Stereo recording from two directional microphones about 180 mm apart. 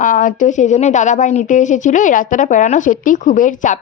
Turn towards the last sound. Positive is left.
turn(degrees=45)  # may be behind; listen again after turning